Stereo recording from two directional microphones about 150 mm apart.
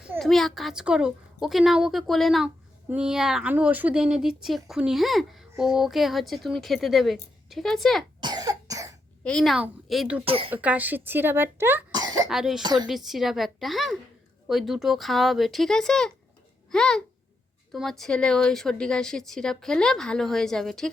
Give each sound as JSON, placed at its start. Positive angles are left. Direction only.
{"t": 0.2, "sound": "speech", "side_deg": 0}
{"t": 8.2, "sound": "cough", "side_deg": -25}
{"t": 9.2, "sound": "speech", "side_deg": 5}
{"t": 10.2, "sound": "speech", "side_deg": -40}
{"t": 10.5, "sound": "a woman's voice", "side_deg": -10}
{"t": 11.9, "sound": "cough", "side_deg": -25}
{"t": 12.3, "sound": "speech", "side_deg": 0}
{"t": 12.6, "sound": "a woman's voice", "side_deg": -30}
{"t": 12.9, "sound": "speech", "side_deg": 0}